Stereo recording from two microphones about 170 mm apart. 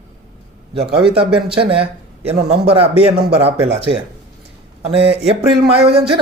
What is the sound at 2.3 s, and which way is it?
Speech, 35° right (ahead or behind).